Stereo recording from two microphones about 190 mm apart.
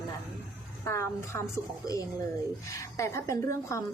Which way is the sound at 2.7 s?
15° left (ahead or behind).